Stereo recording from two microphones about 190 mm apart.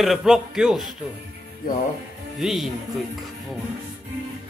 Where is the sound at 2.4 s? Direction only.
Centre (ahead or behind).